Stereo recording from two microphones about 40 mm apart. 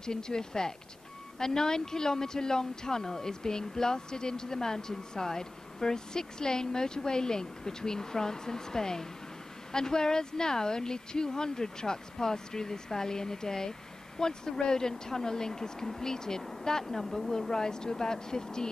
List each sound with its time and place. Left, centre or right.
0.0 s speech: centre